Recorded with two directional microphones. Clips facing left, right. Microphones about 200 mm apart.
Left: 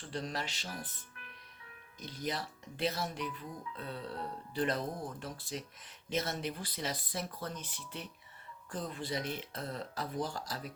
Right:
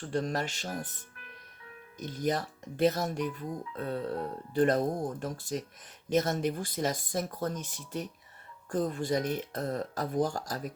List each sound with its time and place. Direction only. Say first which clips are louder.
0.0 s speech: right 8 dB; 50° right (ahead or behind)
2.0 s speech: right 8 dB; 45° right (ahead or behind)